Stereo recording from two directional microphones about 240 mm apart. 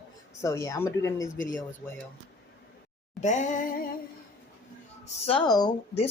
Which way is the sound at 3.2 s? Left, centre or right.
Left.